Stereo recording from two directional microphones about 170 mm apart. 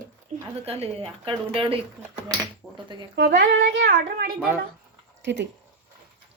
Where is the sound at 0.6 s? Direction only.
35° right (ahead or behind).